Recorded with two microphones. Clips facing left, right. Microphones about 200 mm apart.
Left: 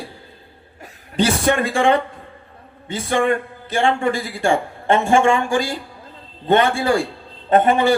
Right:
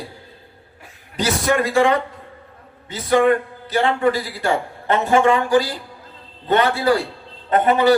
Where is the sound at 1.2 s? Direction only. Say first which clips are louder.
Left 2 dB; 30° left (ahead or behind).